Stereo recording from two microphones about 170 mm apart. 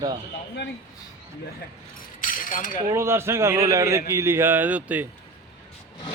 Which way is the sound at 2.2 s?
50° left (ahead or behind).